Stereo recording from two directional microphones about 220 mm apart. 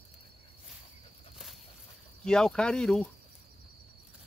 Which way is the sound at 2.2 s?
5° left (ahead or behind).